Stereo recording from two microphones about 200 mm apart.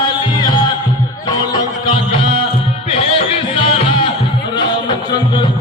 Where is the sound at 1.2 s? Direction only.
20° left (ahead or behind).